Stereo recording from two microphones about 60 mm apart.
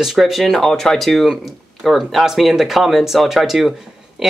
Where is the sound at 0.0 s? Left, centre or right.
Centre.